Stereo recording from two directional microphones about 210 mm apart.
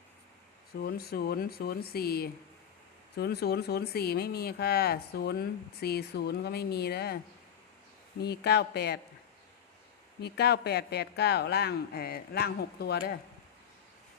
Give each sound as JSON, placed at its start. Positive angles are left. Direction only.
{"t": 0.8, "sound": "speech", "side_deg": 45}
{"t": 8.2, "sound": "speech", "side_deg": 50}
{"t": 10.2, "sound": "speech", "side_deg": 50}